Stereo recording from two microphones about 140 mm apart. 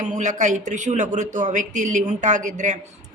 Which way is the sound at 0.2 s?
60° right (ahead or behind).